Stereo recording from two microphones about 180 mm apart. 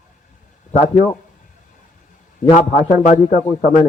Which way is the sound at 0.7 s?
40° left (ahead or behind).